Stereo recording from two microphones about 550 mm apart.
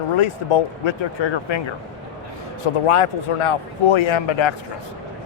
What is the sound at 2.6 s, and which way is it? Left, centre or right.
Speech, left.